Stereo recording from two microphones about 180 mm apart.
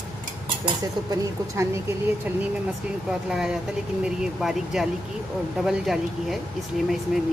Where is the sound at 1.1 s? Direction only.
15° right (ahead or behind).